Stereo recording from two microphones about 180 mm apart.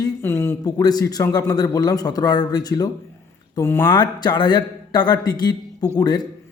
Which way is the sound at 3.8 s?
25° left (ahead or behind).